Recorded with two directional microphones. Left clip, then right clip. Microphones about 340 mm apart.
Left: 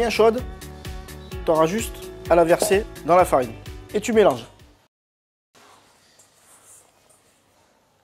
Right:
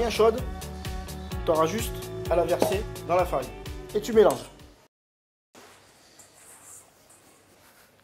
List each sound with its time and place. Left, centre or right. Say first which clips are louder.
0.0 s speech: left 4 dB; left
0.4 s music: left 3 dB; centre
1.4 s speech: left 5 dB; left
2.2 s speech: left 7 dB; left
3.1 s speech: left 8 dB; left
3.4 s music: left 2 dB; centre
3.9 s speech: left 3 dB; left